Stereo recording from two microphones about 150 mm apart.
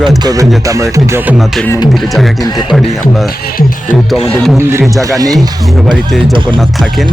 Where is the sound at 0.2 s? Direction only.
25° right (ahead or behind).